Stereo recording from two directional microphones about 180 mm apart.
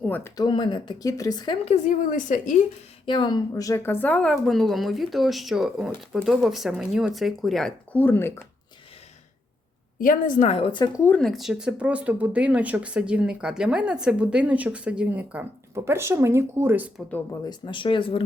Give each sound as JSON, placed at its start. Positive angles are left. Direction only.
{"t": 0.1, "sound": "speech", "side_deg": 15}
{"t": 1.6, "sound": "a woman's voice", "side_deg": 40}
{"t": 3.1, "sound": "a woman's voice", "side_deg": 25}
{"t": 10.0, "sound": "a woman's voice", "side_deg": 50}
{"t": 11.0, "sound": "speech", "side_deg": 5}
{"t": 17.4, "sound": "speech", "side_deg": 25}